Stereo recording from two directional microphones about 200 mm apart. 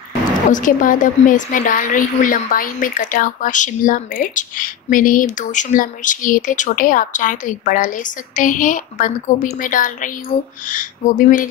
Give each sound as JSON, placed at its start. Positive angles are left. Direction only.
{"t": 0.5, "sound": "a woman's voice", "side_deg": 40}